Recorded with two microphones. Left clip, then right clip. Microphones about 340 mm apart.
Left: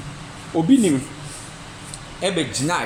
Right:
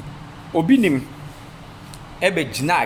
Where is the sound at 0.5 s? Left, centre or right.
Right.